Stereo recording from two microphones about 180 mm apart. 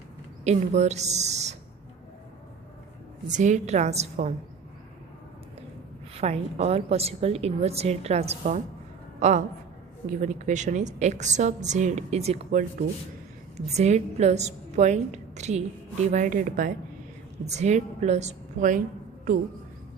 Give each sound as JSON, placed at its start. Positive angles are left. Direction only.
{"t": 0.4, "sound": "a woman's voice", "side_deg": -40}
{"t": 3.3, "sound": "a woman's voice", "side_deg": -40}
{"t": 6.1, "sound": "a woman's voice", "side_deg": -35}
{"t": 13.7, "sound": "a woman's voice", "side_deg": -40}